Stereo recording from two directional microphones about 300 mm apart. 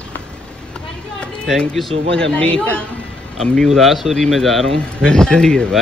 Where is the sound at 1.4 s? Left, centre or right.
Centre.